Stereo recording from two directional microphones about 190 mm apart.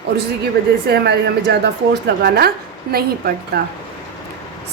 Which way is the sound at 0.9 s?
60° right (ahead or behind).